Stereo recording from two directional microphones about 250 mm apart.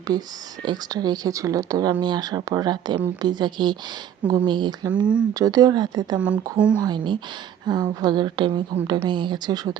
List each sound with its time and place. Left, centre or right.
0.1 s speech: centre
6.2 s speech: centre
6.8 s speech: centre